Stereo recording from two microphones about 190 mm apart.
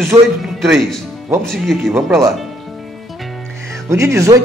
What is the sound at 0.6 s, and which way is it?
Speech, centre (ahead or behind).